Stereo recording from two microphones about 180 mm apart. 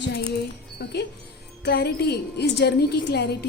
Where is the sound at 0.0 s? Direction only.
60° left (ahead or behind).